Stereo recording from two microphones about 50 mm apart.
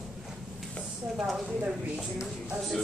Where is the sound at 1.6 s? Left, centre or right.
Centre.